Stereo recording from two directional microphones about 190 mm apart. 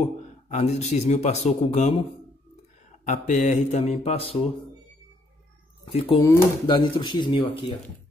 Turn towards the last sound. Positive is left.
turn(degrees=25)  # may be behind; listen again after turning